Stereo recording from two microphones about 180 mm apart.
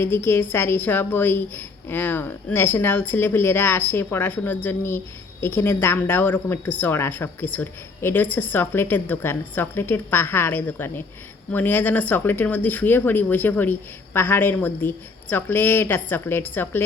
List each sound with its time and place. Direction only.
0.0 s a woman's voice: 10° left (ahead or behind)